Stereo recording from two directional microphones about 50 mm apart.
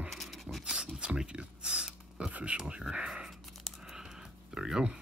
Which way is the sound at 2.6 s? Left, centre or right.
Centre.